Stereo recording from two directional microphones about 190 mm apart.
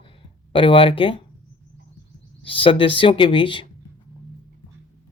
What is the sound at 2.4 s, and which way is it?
Speech, 30° left (ahead or behind).